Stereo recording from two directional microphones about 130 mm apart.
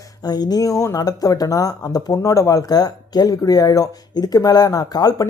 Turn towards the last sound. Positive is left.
turn(degrees=30)  # may be behind; listen again after turning